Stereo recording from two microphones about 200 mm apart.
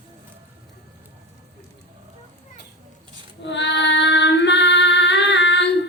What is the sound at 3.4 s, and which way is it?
Female singing, 60° left (ahead or behind).